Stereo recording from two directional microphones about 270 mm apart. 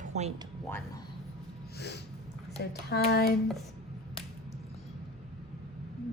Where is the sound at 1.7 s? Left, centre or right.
Left.